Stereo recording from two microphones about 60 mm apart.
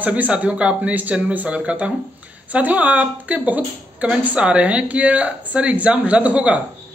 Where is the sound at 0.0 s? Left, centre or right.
Right.